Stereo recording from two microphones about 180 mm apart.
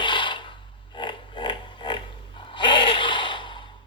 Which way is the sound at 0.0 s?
25° left (ahead or behind).